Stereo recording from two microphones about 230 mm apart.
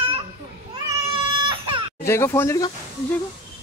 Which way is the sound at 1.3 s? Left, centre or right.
Right.